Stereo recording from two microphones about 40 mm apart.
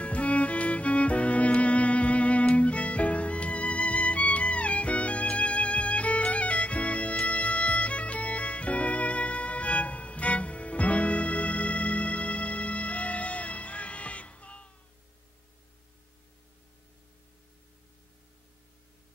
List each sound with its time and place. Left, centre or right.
0.0 s music: left